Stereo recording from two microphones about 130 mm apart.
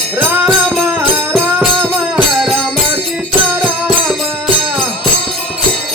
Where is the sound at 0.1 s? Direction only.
15° right (ahead or behind).